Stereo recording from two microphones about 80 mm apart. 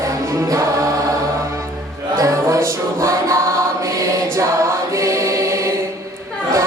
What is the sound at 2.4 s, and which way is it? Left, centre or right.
Music, right.